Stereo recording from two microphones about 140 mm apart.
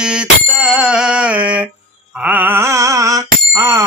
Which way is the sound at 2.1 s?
10° right (ahead or behind).